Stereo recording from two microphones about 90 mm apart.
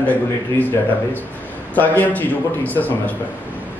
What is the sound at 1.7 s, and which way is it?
A man's voice, 20° left (ahead or behind).